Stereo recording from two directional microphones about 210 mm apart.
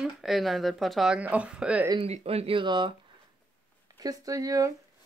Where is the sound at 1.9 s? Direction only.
25° right (ahead or behind).